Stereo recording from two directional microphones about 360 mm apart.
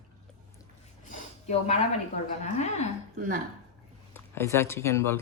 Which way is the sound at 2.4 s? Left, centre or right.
Centre.